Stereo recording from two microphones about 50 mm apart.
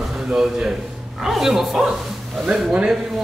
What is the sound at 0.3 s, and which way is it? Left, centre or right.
A man's voice, centre.